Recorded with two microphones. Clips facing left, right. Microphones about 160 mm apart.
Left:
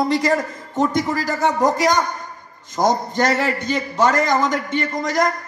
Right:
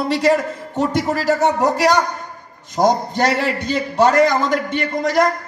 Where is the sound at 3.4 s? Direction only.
65° right (ahead or behind).